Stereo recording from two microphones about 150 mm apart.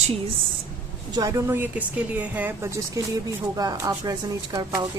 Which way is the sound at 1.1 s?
20° right (ahead or behind).